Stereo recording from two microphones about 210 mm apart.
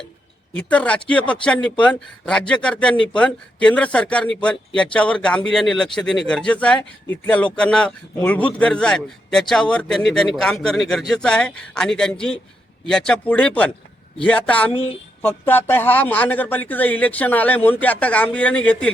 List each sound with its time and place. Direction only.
0.5 s a man's voice: 5° left (ahead or behind)